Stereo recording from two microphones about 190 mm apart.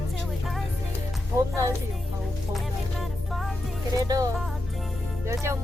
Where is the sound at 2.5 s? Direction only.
Centre (ahead or behind).